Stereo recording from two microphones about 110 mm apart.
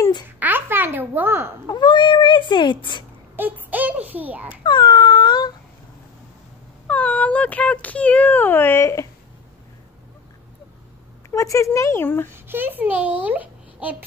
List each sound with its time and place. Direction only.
0.4 s babbling: 20° right (ahead or behind)
1.7 s speech: 45° left (ahead or behind)
3.3 s a child's voice: 15° right (ahead or behind)
4.6 s a sound: 40° left (ahead or behind)
6.9 s speech: 10° left (ahead or behind)
11.2 s speech: 30° left (ahead or behind)
12.3 s a child's voice: 20° right (ahead or behind)